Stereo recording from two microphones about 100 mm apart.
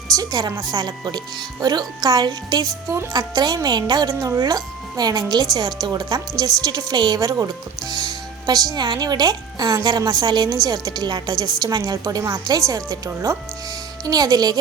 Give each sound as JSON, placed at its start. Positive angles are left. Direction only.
{"t": 0.2, "sound": "a woman's voice", "side_deg": -40}